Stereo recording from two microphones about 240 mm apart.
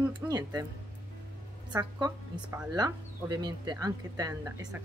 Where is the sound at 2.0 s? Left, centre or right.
Centre.